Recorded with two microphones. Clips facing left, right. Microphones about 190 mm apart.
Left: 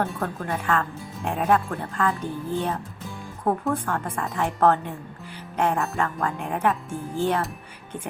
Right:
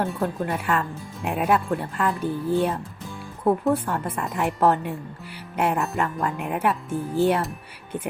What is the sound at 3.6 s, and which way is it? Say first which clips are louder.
Speech: right 3 dB; 5° right (ahead or behind).